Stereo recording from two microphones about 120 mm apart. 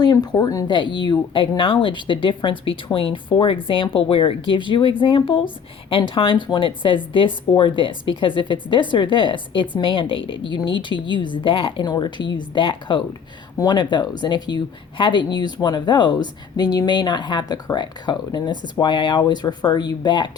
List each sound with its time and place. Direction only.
0.0 s speech: 35° left (ahead or behind)
0.7 s speech: 40° left (ahead or behind)